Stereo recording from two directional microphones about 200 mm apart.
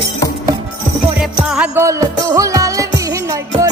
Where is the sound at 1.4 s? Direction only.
5° right (ahead or behind).